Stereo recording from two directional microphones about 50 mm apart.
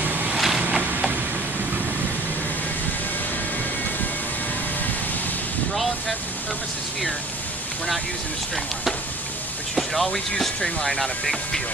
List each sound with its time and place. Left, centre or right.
0.0 s vehicle: right
0.3 s vehicle: centre
9.8 s speech: centre